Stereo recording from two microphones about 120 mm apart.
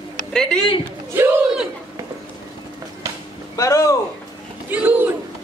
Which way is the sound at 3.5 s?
25° left (ahead or behind).